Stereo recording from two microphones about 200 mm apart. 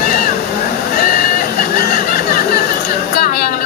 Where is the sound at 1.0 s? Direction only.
50° left (ahead or behind).